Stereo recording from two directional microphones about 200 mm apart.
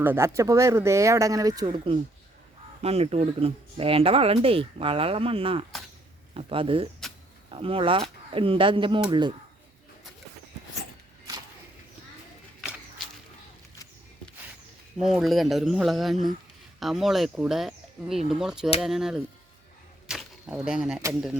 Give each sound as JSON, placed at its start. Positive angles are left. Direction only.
{"t": 0.0, "sound": "speech", "side_deg": -10}
{"t": 14.9, "sound": "speech", "side_deg": 0}
{"t": 20.1, "sound": "a sound", "side_deg": -5}
{"t": 21.0, "sound": "speech", "side_deg": -5}